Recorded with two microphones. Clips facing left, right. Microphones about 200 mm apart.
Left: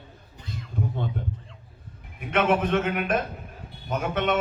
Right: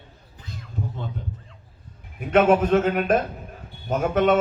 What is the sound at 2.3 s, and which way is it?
Speech, 40° right (ahead or behind).